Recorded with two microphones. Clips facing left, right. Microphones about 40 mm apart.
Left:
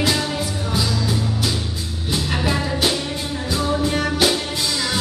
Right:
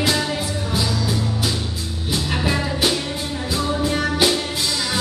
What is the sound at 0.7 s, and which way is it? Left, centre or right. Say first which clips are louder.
Music: left 1 dB; centre.